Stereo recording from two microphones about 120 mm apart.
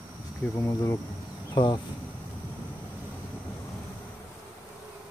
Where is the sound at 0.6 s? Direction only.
30° left (ahead or behind).